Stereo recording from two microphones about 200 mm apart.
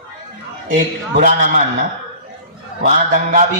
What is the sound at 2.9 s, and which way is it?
Speech, 40° right (ahead or behind).